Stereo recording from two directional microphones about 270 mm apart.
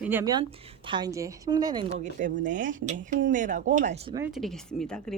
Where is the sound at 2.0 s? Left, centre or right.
Right.